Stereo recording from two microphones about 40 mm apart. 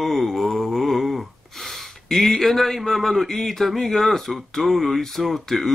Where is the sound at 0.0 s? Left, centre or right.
Centre.